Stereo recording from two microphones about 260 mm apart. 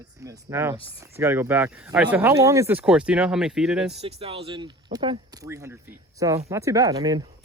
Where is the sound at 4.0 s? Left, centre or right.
Right.